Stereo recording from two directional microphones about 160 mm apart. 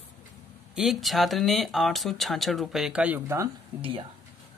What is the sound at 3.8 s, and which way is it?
Speech, 35° right (ahead or behind).